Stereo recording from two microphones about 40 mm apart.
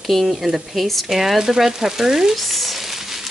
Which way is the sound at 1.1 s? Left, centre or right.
Centre.